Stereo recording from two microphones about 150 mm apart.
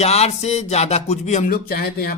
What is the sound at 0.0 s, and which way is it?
Speech, 45° left (ahead or behind).